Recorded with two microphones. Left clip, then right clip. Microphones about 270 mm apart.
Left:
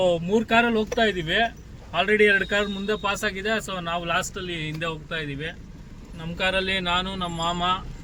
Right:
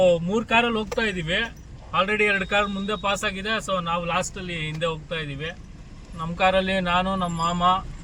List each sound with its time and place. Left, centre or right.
0.0 s a man's voice: centre; by 7.8 s left